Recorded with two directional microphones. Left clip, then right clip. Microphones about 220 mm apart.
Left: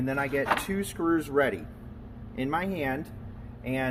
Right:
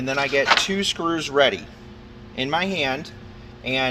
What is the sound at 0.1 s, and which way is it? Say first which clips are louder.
A man's voice: right 9 dB; 35° right (ahead or behind).